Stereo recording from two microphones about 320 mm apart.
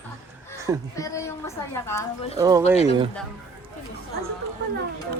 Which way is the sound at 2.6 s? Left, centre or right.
Centre.